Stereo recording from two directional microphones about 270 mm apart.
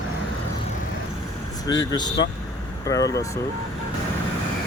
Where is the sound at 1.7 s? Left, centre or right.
Centre.